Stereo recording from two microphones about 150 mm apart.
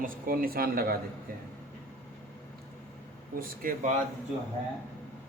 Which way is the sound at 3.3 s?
65° right (ahead or behind).